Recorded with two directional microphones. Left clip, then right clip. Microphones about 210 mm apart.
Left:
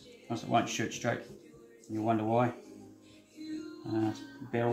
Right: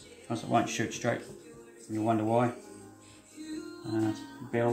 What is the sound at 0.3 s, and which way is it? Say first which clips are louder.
Speech: right 1 dB; 15° right (ahead or behind).